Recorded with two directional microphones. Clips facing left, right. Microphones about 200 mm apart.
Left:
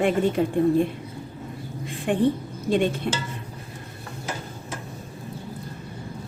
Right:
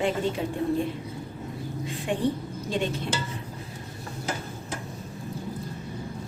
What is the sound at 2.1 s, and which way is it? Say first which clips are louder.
Speech: left 6 dB; 55° left (ahead or behind).